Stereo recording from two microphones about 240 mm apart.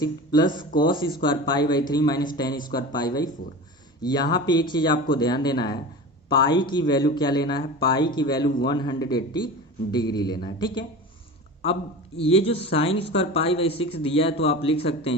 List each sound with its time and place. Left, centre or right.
0.0 s a man's voice: centre